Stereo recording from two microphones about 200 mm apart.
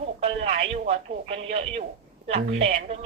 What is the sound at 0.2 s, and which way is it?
A woman's voice, 30° right (ahead or behind).